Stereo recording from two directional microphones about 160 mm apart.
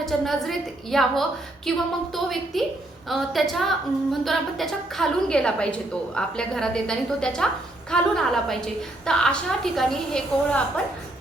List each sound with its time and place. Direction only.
0.0 s a woman's voice: centre (ahead or behind)